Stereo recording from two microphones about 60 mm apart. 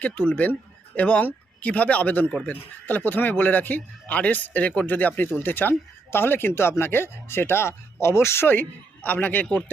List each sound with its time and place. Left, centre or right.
0.0 s speech: left
9.1 s speech: left